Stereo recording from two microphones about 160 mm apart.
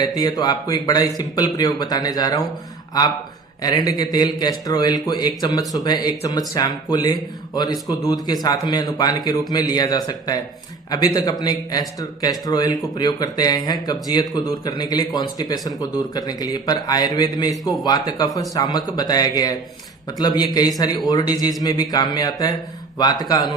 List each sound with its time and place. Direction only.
0.0 s speech: 25° left (ahead or behind)
3.6 s speech: 25° left (ahead or behind)